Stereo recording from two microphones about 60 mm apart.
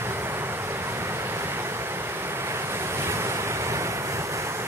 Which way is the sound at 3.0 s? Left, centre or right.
Right.